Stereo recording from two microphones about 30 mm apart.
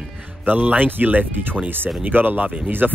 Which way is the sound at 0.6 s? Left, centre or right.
Right.